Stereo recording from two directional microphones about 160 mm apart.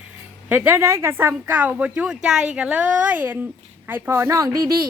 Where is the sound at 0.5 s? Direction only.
15° right (ahead or behind).